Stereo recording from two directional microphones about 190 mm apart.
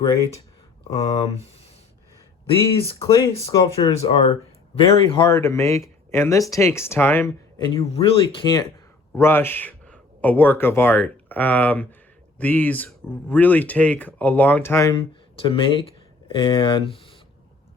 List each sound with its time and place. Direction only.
0.9 s speech: 20° left (ahead or behind)
3.0 s speech: 15° left (ahead or behind)
7.8 s speech: 30° left (ahead or behind)
9.1 s a man's voice: 10° left (ahead or behind); by 17.2 s 30° left (ahead or behind)